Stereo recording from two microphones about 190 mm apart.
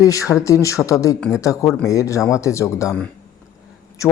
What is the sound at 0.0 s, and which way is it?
Speech, 15° left (ahead or behind).